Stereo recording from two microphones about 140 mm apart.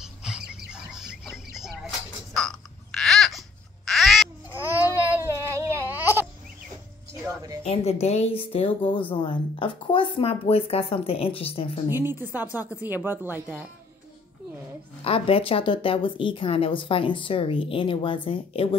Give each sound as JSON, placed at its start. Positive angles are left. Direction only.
{"t": 0.0, "sound": "a sound", "side_deg": -5}
{"t": 5.0, "sound": "baby cry", "side_deg": -20}
{"t": 7.6, "sound": "a woman's voice", "side_deg": 50}
{"t": 11.9, "sound": "speech", "side_deg": -15}
{"t": 15.0, "sound": "speech", "side_deg": 40}